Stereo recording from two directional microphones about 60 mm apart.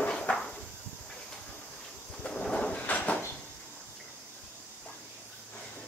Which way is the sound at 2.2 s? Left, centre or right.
Centre.